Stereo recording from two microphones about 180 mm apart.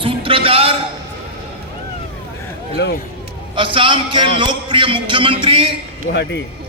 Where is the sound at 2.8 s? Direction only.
75° left (ahead or behind).